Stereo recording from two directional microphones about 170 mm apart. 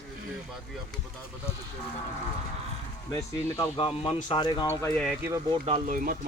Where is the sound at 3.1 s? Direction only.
15° left (ahead or behind).